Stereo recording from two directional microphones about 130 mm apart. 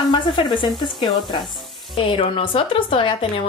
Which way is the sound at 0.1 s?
40° left (ahead or behind).